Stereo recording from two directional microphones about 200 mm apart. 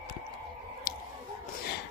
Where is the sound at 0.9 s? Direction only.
50° left (ahead or behind).